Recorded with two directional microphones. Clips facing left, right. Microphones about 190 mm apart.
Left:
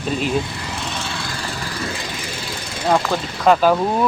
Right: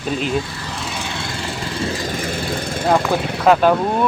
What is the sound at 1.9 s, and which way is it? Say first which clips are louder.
Vehicle: right 6 dB; 50° right (ahead or behind).